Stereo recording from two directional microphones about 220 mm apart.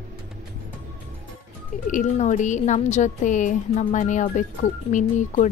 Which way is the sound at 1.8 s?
35° left (ahead or behind).